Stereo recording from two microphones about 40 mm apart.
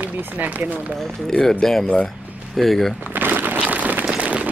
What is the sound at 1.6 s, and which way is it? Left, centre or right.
Speech, centre.